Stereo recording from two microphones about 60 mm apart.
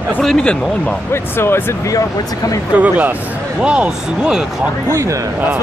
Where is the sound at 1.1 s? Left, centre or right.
Left.